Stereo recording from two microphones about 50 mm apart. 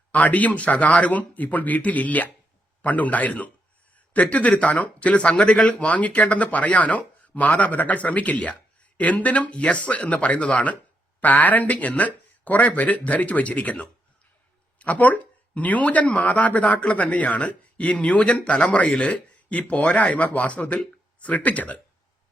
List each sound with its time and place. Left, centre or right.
0.1 s speech: left